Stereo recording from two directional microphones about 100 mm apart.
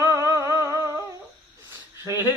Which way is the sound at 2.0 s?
30° right (ahead or behind).